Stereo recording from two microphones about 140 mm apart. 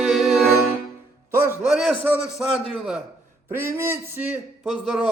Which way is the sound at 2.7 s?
5° right (ahead or behind).